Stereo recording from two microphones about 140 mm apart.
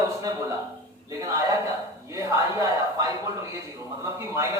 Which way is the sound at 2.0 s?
25° right (ahead or behind).